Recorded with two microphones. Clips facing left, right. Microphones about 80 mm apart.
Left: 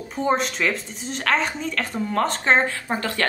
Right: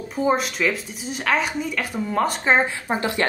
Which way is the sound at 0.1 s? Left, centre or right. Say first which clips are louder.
Right 1 dB; centre.